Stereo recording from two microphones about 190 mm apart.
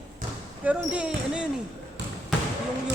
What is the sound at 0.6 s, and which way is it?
Speech, 5° right (ahead or behind).